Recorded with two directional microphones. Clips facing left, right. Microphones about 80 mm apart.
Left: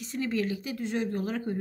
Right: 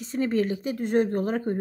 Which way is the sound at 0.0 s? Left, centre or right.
Right.